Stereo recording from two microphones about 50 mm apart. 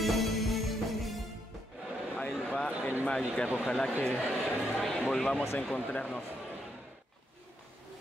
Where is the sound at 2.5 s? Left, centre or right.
Left.